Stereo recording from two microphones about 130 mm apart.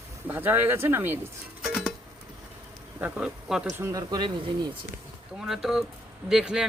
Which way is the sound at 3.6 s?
25° right (ahead or behind).